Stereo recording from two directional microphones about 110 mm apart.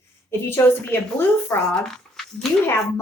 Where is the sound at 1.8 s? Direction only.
5° left (ahead or behind).